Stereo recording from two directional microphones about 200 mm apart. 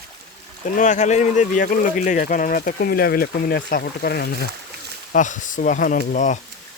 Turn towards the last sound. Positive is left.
turn(degrees=40)  # may be behind; listen again after turning